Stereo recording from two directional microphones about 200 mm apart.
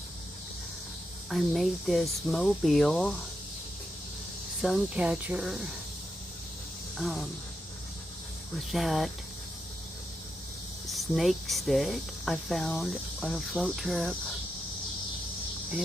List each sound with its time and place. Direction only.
1.3 s speech: centre (ahead or behind)
4.6 s speech: 5° right (ahead or behind)
6.9 s speech: centre (ahead or behind)
8.7 s speech: centre (ahead or behind)
10.8 s speech: centre (ahead or behind)